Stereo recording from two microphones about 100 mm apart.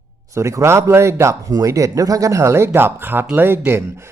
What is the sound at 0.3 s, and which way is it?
Speech, 30° right (ahead or behind).